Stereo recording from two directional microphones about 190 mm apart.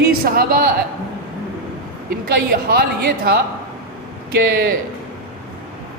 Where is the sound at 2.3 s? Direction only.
55° right (ahead or behind).